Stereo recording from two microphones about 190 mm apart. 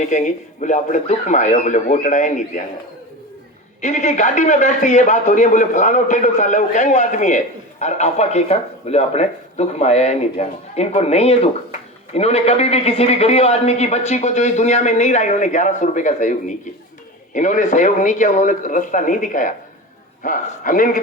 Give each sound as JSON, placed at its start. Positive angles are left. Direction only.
{"t": 0.0, "sound": "a man's voice", "side_deg": 40}
{"t": 3.8, "sound": "a man's voice", "side_deg": 40}